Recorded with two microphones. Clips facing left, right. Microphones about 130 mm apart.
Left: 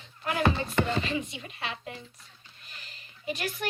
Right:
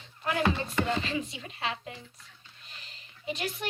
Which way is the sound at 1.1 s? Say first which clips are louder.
Left 1 dB; 30° right (ahead or behind).